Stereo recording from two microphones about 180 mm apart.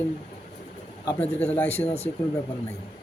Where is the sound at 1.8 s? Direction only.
35° left (ahead or behind).